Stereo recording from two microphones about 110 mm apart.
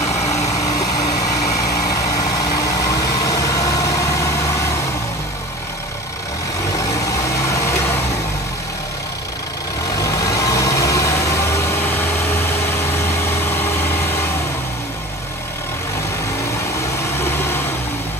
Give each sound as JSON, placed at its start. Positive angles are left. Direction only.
{"t": 0.0, "sound": "vehicle", "side_deg": 85}
{"t": 0.5, "sound": "vehicle", "side_deg": 30}
{"t": 1.9, "sound": "vehicle", "side_deg": 35}
{"t": 6.8, "sound": "vehicle", "side_deg": 30}
{"t": 9.9, "sound": "vehicle", "side_deg": 30}
{"t": 17.2, "sound": "a sound", "side_deg": 20}